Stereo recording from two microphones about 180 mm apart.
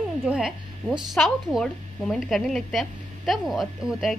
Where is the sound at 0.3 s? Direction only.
5° right (ahead or behind).